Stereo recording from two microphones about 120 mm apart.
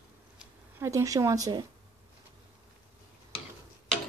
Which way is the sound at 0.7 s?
25° right (ahead or behind).